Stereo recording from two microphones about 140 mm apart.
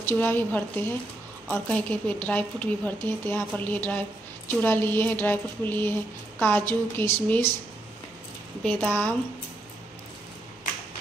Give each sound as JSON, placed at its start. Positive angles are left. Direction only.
{"t": 0.0, "sound": "a woman's voice", "side_deg": 15}
{"t": 8.8, "sound": "a woman's voice", "side_deg": 10}